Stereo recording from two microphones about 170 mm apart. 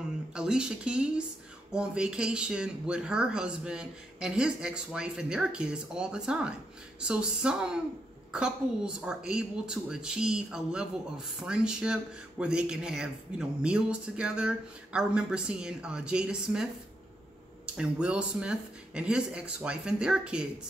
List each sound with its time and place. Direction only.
0.3 s speech: 5° right (ahead or behind)
17.7 s speech: 5° right (ahead or behind)